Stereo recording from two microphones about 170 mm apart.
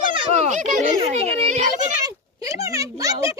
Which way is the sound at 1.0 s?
35° right (ahead or behind).